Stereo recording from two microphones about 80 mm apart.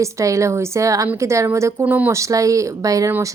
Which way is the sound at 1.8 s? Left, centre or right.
Centre.